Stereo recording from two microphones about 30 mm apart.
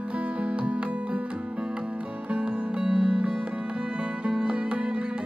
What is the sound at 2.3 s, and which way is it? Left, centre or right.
Music, right.